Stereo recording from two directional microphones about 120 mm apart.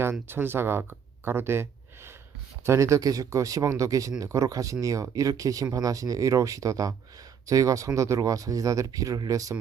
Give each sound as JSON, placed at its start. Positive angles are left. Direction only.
{"t": 0.0, "sound": "speech", "side_deg": -20}
{"t": 2.6, "sound": "speech", "side_deg": -25}